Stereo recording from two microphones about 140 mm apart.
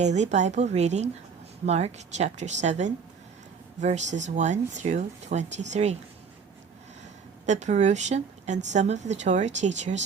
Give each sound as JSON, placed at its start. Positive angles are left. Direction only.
{"t": 0.0, "sound": "a woman's voice", "side_deg": -55}
{"t": 7.4, "sound": "a woman's voice", "side_deg": -55}